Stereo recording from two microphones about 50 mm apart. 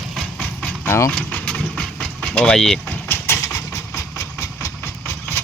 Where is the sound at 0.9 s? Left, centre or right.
Left.